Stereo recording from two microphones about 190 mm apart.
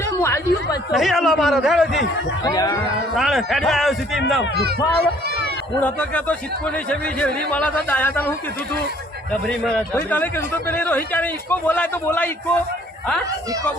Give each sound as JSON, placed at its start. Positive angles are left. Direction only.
{"t": 0.0, "sound": "speech", "side_deg": 15}
{"t": 0.9, "sound": "a man's voice", "side_deg": 0}
{"t": 2.4, "sound": "speech", "side_deg": 20}
{"t": 3.2, "sound": "a man's voice", "side_deg": 0}
{"t": 4.5, "sound": "speech", "side_deg": -55}
{"t": 5.8, "sound": "a man's voice", "side_deg": 10}